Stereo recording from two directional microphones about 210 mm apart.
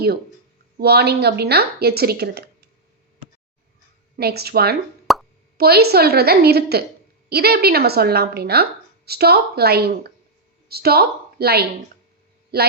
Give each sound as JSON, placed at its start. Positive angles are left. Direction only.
{"t": 0.8, "sound": "a woman's voice", "side_deg": -50}
{"t": 4.2, "sound": "a woman's voice", "side_deg": -50}
{"t": 5.1, "sound": "plop", "side_deg": 0}
{"t": 5.5, "sound": "a woman's voice", "side_deg": -50}